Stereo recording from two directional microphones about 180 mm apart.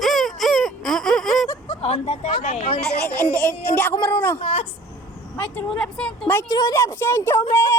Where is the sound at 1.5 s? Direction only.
30° left (ahead or behind).